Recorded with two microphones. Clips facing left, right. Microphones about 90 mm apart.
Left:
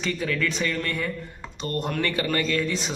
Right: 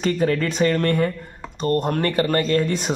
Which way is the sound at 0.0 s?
45° right (ahead or behind).